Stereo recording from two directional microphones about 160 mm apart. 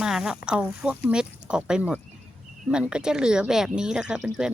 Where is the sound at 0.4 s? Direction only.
5° right (ahead or behind).